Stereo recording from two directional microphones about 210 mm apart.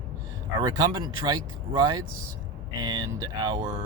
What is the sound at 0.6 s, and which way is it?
Speech, 20° right (ahead or behind).